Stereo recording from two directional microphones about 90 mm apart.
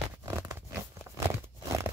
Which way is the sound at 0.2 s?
35° right (ahead or behind).